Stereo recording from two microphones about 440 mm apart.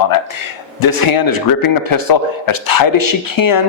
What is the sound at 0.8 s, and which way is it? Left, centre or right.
Speech, left.